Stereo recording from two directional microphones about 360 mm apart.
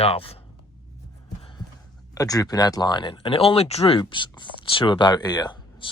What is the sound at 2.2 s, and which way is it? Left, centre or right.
Speech, centre.